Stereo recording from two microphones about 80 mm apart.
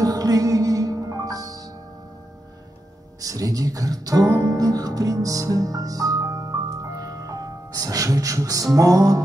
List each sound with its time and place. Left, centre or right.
0.0 s music: right
3.2 s speech: right